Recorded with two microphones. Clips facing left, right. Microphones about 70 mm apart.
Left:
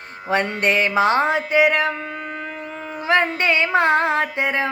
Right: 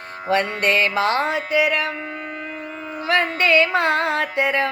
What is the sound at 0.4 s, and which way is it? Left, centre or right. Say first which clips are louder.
Music: even; left.